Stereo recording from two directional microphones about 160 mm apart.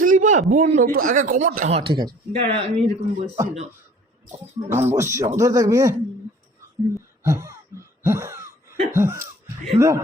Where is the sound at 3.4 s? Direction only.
20° right (ahead or behind).